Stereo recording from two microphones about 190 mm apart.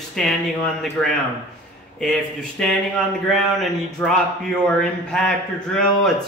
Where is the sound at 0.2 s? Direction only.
Centre (ahead or behind).